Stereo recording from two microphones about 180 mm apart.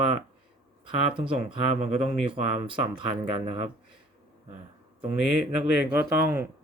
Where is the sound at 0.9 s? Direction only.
30° right (ahead or behind).